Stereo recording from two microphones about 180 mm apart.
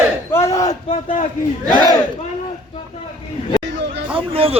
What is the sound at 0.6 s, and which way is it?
Speech, 40° left (ahead or behind).